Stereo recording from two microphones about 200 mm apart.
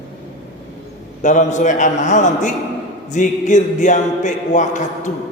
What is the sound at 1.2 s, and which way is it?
A man's voice, 40° left (ahead or behind).